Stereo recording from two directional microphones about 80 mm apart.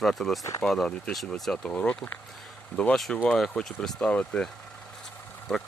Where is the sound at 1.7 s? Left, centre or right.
Centre.